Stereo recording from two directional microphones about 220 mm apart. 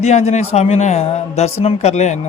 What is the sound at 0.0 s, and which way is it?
Speech, 30° left (ahead or behind).